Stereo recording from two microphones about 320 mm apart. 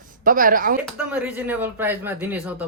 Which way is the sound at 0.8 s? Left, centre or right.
Centre.